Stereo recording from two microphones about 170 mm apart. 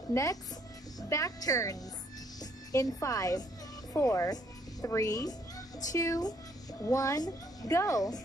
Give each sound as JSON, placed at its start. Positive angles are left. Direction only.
{"t": 0.1, "sound": "a child's voice", "side_deg": 20}